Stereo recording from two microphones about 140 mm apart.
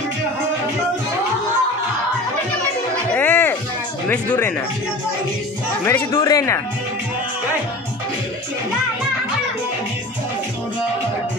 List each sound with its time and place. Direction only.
3.2 s music: 10° left (ahead or behind)
4.1 s speech: 10° left (ahead or behind)
5.9 s speech: 20° left (ahead or behind)